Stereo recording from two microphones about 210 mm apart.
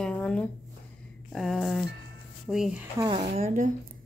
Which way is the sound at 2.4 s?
Centre (ahead or behind).